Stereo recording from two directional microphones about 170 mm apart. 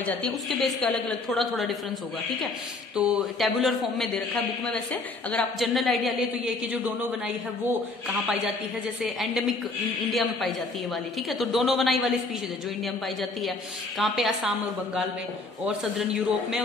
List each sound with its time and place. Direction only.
0.0 s a woman's voice: 5° left (ahead or behind)
3.0 s a woman's voice: 5° right (ahead or behind)
5.3 s a woman's voice: centre (ahead or behind)
9.0 s a woman's voice: centre (ahead or behind)
15.6 s a woman's voice: centre (ahead or behind)